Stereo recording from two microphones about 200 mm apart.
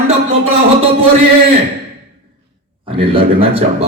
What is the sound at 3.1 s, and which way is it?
Speech, 30° right (ahead or behind).